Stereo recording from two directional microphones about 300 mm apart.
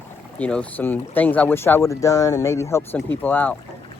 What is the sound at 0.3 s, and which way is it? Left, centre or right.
Speech, centre.